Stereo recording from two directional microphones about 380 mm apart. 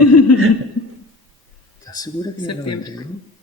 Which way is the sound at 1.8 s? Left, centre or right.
Centre.